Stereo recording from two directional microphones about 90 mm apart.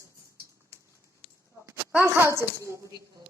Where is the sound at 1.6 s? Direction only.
20° right (ahead or behind).